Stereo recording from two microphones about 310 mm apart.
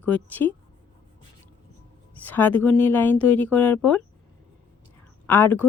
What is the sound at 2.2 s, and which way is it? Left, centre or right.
Speech, centre.